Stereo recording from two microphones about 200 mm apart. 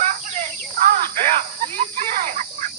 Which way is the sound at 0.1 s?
40° right (ahead or behind).